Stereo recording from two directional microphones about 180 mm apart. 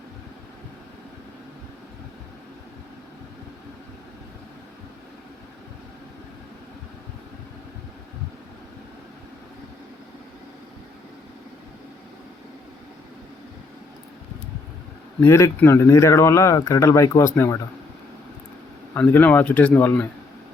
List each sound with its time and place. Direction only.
15.2 s speech: 15° left (ahead or behind)
18.9 s speech: 10° left (ahead or behind)